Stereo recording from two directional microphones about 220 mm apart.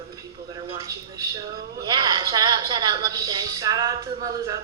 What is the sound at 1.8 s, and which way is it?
A woman's voice, 20° right (ahead or behind).